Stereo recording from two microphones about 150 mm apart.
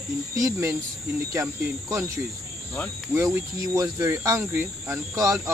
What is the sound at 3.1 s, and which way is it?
Speech, 20° right (ahead or behind).